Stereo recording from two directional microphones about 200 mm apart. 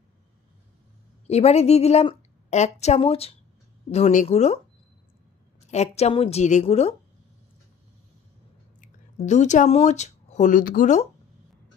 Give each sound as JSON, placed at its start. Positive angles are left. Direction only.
{"t": 1.2, "sound": "a woman's voice", "side_deg": 35}
{"t": 5.7, "sound": "a woman's voice", "side_deg": 35}
{"t": 8.8, "sound": "speech", "side_deg": 35}